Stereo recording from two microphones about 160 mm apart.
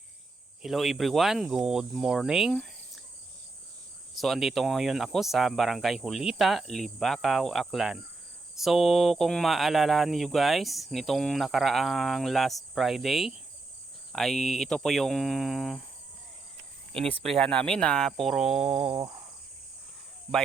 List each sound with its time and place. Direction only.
0.6 s speech: centre (ahead or behind)
4.2 s speech: centre (ahead or behind)
17.2 s speech: 5° left (ahead or behind)
18.7 s cricket: 40° right (ahead or behind)